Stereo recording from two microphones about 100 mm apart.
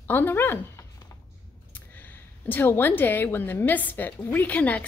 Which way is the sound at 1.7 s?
20° left (ahead or behind).